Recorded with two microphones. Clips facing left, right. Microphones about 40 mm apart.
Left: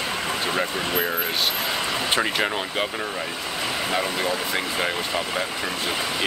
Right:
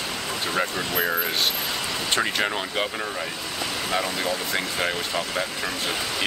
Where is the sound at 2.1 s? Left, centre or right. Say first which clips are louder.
Even; centre.